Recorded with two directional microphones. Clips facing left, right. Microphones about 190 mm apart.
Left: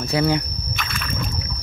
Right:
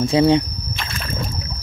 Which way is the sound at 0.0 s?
25° right (ahead or behind).